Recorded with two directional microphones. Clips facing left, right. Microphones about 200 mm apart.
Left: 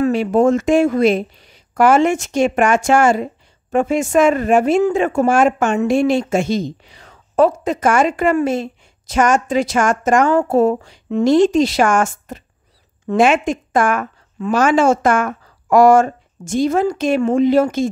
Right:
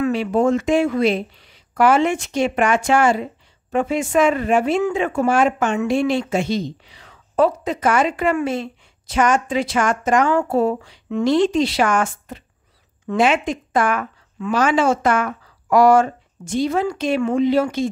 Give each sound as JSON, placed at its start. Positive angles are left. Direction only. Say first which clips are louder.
{"t": 0.0, "sound": "speech", "louder": "left 4 dB", "side_deg": 45}